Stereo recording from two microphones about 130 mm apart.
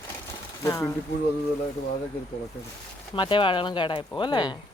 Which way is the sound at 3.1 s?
40° left (ahead or behind).